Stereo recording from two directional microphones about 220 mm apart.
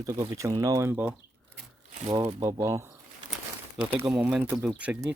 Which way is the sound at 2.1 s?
15° right (ahead or behind).